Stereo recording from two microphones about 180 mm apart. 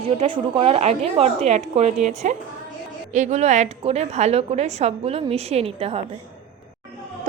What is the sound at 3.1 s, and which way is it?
A woman's voice, 40° right (ahead or behind).